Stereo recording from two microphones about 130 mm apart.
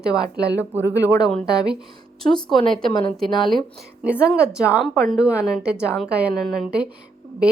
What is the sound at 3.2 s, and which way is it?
Speech, 35° left (ahead or behind).